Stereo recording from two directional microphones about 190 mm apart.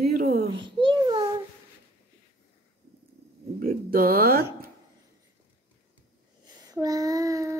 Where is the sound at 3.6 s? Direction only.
50° right (ahead or behind).